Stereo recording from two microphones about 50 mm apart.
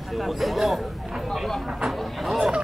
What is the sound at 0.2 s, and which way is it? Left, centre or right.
Speech, centre.